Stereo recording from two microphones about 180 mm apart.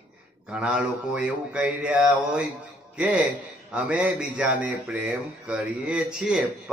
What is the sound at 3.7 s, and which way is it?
A man's voice, 5° right (ahead or behind).